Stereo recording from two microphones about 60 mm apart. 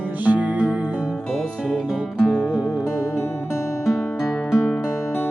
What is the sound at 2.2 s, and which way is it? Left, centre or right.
Music, left.